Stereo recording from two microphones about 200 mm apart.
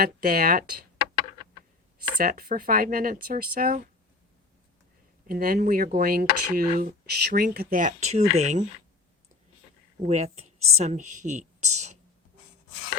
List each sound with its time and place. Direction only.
0.0 s speech: 45° right (ahead or behind)
2.1 s speech: 45° right (ahead or behind)
5.3 s speech: 45° right (ahead or behind)
10.1 s speech: 35° right (ahead or behind)